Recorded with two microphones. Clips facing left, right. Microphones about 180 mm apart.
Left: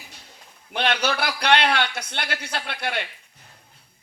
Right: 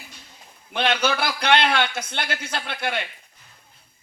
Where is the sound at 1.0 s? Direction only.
65° left (ahead or behind).